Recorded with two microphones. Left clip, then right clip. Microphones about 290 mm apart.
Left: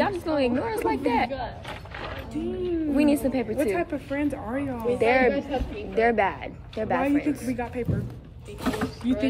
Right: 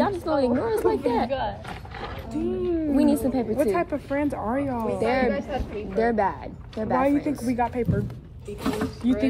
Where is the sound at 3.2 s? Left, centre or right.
Centre.